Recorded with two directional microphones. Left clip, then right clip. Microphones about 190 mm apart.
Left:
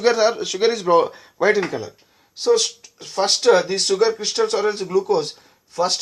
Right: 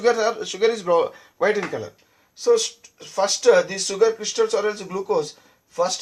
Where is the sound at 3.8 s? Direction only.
35° left (ahead or behind).